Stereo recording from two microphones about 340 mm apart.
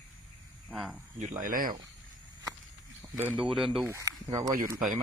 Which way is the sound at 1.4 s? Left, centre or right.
Right.